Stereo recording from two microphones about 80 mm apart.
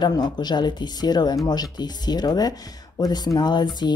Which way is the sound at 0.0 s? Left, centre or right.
Left.